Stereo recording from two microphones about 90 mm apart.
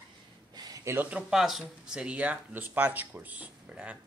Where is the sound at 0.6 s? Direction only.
45° right (ahead or behind).